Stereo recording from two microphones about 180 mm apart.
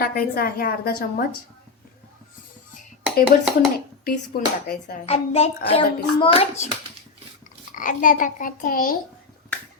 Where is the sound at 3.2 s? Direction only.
5° right (ahead or behind).